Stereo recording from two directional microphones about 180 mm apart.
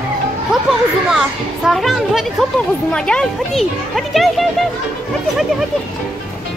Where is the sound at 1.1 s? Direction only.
Centre (ahead or behind).